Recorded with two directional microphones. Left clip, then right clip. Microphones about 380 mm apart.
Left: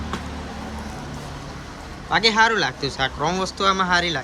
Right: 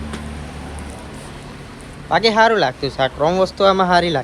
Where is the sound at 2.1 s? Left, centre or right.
Centre.